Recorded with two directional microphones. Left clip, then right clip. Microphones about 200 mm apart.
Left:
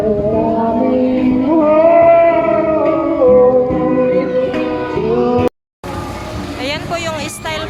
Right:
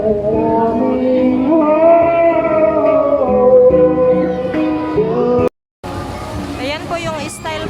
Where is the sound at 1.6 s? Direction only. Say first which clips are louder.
Left 2 dB; 50° left (ahead or behind).